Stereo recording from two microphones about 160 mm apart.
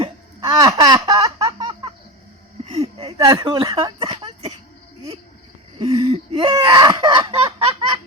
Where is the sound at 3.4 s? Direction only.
35° right (ahead or behind).